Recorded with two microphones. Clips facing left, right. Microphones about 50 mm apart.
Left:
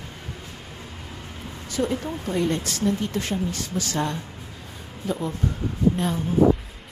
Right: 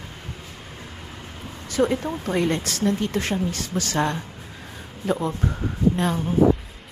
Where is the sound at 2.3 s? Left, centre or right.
Right.